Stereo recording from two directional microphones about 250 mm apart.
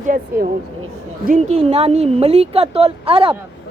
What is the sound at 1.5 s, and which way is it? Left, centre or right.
A woman's voice, right.